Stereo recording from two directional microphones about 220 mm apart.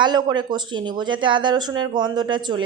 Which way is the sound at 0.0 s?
20° right (ahead or behind).